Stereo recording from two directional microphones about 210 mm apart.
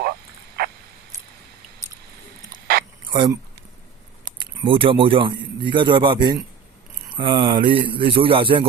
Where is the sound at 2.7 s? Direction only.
45° right (ahead or behind).